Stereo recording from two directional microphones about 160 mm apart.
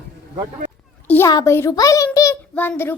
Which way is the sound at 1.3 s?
20° left (ahead or behind).